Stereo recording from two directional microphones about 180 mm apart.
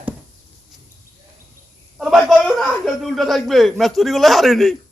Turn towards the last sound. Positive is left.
turn(degrees=0)  # may be behind; listen again after turning